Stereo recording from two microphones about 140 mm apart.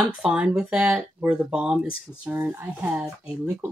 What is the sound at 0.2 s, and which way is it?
Speech, 5° right (ahead or behind).